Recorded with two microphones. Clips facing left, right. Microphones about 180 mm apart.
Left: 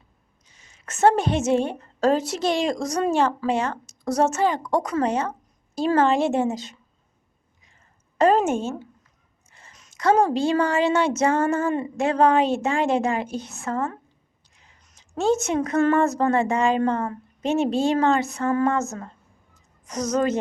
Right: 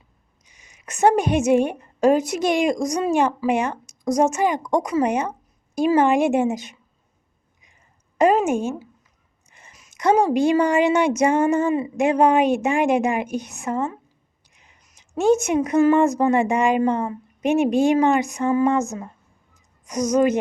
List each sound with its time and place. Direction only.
0.4 s a woman's voice: 15° right (ahead or behind)
8.2 s a woman's voice: 10° right (ahead or behind)